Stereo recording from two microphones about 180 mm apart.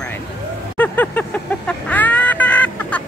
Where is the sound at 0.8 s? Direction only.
10° left (ahead or behind).